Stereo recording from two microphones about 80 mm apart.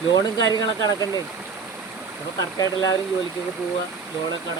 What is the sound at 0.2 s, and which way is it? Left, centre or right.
Speech, left.